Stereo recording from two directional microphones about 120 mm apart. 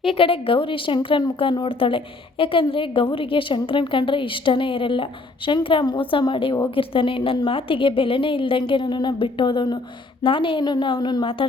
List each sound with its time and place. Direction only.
0.0 s a woman's voice: 50° left (ahead or behind)